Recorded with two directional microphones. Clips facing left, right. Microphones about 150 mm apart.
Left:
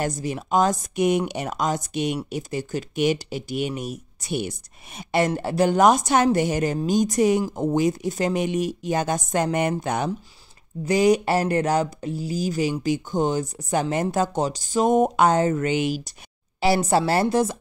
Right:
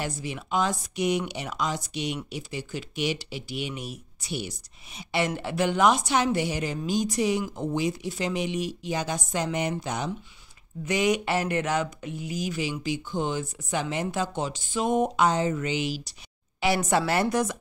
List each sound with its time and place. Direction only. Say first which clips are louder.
0.0 s speech: left 6 dB; 40° left (ahead or behind)
10.9 s speech: left 6 dB; 35° left (ahead or behind); by 16.2 s 50° left (ahead or behind)
16.6 s speech: left 4 dB; 35° left (ahead or behind)